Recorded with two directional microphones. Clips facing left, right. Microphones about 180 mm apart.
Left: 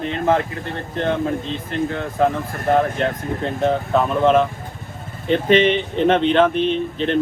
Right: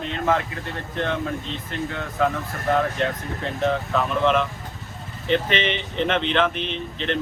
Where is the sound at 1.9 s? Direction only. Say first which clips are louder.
Left 3 dB; 35° left (ahead or behind).